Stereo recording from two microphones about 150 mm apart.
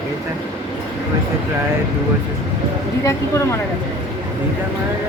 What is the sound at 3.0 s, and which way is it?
Speech, 20° left (ahead or behind).